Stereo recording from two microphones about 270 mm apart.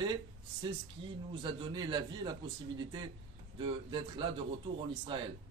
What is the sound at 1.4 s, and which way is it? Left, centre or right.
A man's voice, centre.